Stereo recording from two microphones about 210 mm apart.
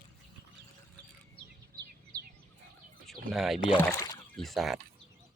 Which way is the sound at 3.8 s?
10° left (ahead or behind).